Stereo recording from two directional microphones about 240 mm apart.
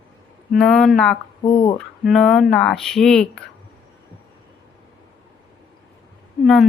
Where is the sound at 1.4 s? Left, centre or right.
Left.